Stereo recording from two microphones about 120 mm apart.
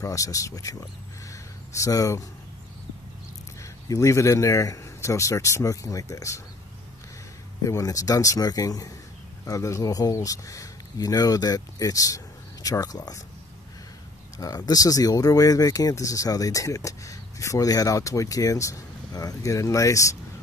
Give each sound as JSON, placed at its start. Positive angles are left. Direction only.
{"t": 0.0, "sound": "speech", "side_deg": 25}
{"t": 3.9, "sound": "speech", "side_deg": 25}
{"t": 7.6, "sound": "speech", "side_deg": 30}
{"t": 14.4, "sound": "speech", "side_deg": 30}